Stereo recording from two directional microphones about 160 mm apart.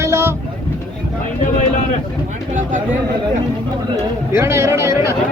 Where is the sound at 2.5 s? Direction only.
55° right (ahead or behind).